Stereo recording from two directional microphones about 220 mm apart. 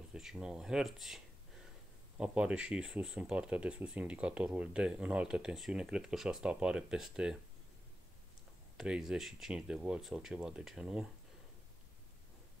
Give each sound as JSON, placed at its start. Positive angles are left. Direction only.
{"t": 0.1, "sound": "speech", "side_deg": -5}
{"t": 8.7, "sound": "speech", "side_deg": -5}